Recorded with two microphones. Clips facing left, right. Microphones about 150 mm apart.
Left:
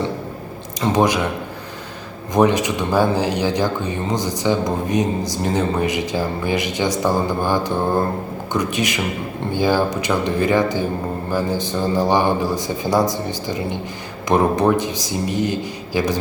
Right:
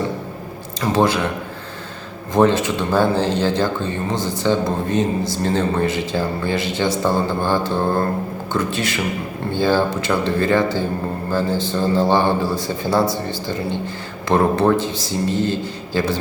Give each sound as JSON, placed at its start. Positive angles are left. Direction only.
{"t": 0.8, "sound": "speech", "side_deg": 15}
{"t": 2.3, "sound": "speech", "side_deg": 15}